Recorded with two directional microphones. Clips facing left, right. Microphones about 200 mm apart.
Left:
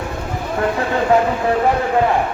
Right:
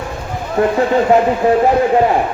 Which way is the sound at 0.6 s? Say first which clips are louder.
Right 6 dB; 25° right (ahead or behind).